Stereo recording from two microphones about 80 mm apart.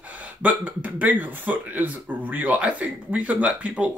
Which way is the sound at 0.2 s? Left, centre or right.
Right.